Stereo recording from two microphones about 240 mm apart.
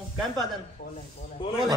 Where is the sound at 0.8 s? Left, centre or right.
Left.